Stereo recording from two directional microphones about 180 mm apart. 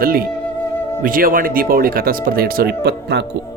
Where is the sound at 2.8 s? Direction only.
70° right (ahead or behind).